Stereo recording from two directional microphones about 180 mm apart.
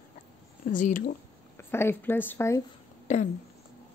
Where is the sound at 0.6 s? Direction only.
45° left (ahead or behind).